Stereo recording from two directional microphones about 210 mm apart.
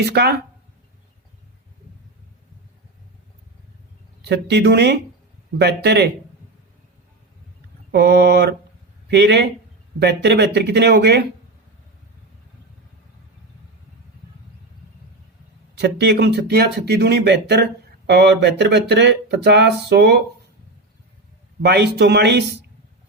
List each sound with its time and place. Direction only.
0.0 s speech: 50° right (ahead or behind)
4.2 s speech: 55° right (ahead or behind)
7.9 s speech: 50° right (ahead or behind)
15.8 s speech: 55° right (ahead or behind)
21.6 s speech: 50° right (ahead or behind)